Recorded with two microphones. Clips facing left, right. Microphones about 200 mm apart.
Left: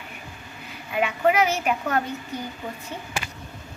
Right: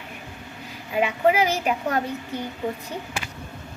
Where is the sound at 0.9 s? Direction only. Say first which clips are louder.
Right 1 dB; 30° right (ahead or behind).